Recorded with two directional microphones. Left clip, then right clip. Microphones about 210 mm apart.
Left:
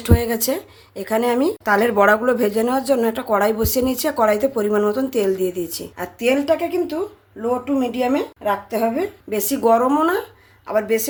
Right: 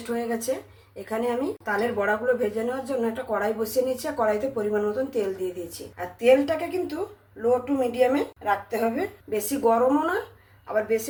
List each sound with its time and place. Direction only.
0.1 s speech: 50° left (ahead or behind)